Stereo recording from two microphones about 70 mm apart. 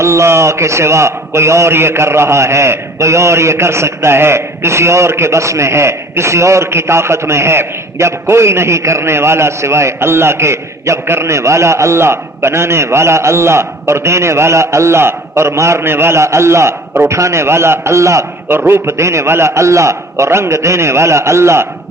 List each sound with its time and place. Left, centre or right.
0.0 s a man's voice: right